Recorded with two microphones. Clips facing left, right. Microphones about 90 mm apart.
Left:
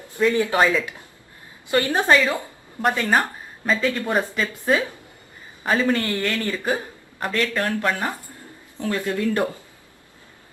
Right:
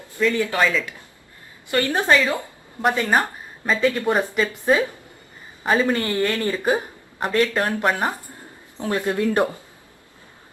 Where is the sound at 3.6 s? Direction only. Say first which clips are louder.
Right 2 dB; 5° right (ahead or behind).